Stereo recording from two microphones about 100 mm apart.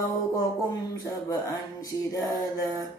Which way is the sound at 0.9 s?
40° left (ahead or behind).